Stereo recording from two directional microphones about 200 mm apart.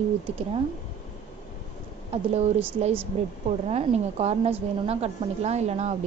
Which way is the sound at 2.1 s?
30° right (ahead or behind).